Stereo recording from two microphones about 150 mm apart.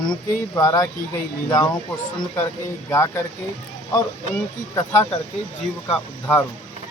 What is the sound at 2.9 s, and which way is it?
Speech, 20° left (ahead or behind).